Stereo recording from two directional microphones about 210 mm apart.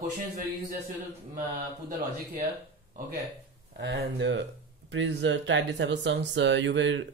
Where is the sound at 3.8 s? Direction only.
55° right (ahead or behind).